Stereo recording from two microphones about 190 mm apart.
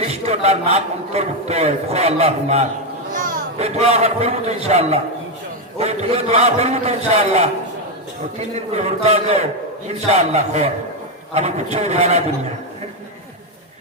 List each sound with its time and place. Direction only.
0.0 s a man's voice: 35° right (ahead or behind)
3.1 s a sound: 45° right (ahead or behind)
3.6 s a man's voice: 35° right (ahead or behind)